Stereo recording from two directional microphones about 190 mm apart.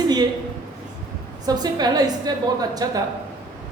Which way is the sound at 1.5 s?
20° right (ahead or behind).